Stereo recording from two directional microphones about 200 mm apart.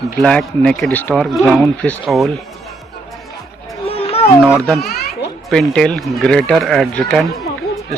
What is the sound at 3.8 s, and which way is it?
Children playing, 30° left (ahead or behind).